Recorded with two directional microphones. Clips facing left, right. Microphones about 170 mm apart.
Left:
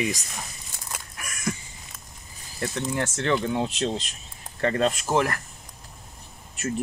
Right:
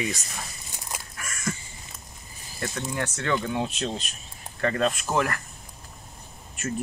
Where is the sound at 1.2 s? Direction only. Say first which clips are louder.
Left 2 dB; 15° left (ahead or behind).